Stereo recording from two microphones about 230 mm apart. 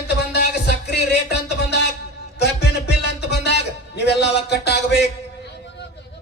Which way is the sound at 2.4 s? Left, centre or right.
Left.